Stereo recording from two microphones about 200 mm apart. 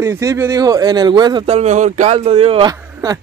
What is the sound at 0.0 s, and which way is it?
Speech, 15° right (ahead or behind).